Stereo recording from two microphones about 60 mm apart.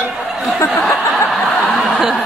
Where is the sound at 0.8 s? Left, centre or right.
Centre.